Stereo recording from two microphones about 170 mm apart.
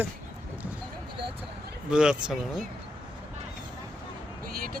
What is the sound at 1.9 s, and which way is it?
Speech, 5° right (ahead or behind).